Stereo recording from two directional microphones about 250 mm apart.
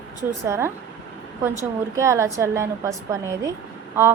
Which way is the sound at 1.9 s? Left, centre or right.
Centre.